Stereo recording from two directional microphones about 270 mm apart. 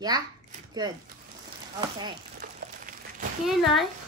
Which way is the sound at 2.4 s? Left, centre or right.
Right.